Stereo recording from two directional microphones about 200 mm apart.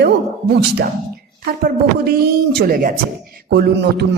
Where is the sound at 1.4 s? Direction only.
50° right (ahead or behind).